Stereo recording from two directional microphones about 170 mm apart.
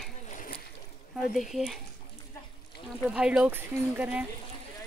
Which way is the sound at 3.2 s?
5° right (ahead or behind).